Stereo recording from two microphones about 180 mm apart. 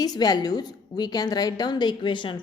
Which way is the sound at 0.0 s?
20° left (ahead or behind).